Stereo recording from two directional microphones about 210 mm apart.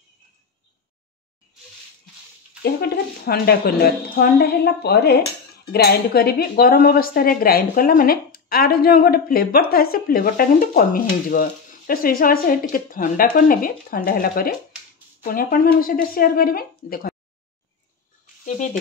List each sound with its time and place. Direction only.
2.6 s speech: 45° left (ahead or behind)
18.4 s speech: 35° left (ahead or behind)